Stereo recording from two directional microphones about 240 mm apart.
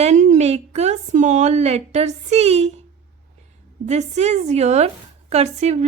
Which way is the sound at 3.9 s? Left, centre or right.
Right.